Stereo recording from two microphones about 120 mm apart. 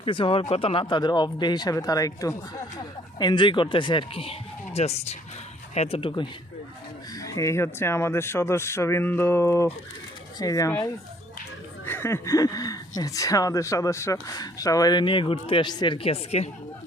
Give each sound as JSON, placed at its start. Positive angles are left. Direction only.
{"t": 0.0, "sound": "speech", "side_deg": 45}
{"t": 6.0, "sound": "speech", "side_deg": 45}
{"t": 7.2, "sound": "speech", "side_deg": 25}
{"t": 11.9, "sound": "a sound", "side_deg": 20}
{"t": 13.0, "sound": "speech", "side_deg": 30}
{"t": 16.0, "sound": "a woman's voice", "side_deg": 60}